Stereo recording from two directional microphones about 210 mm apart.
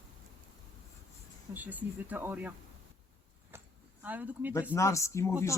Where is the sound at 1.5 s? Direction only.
10° right (ahead or behind).